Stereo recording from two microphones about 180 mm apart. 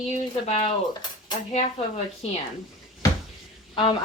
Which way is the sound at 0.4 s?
35° left (ahead or behind).